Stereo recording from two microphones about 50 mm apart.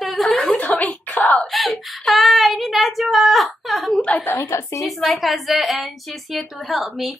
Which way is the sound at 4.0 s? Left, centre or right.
Left.